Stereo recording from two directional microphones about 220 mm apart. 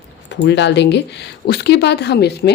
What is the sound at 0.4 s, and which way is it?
Speech, 50° left (ahead or behind).